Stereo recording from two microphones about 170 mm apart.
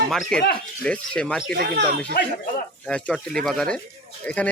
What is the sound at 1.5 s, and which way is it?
Speech, 70° right (ahead or behind).